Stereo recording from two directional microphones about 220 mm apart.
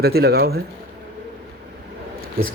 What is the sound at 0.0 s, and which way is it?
Speech, 45° right (ahead or behind).